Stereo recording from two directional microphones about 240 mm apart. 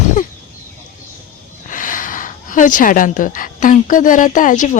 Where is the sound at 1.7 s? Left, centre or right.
Left.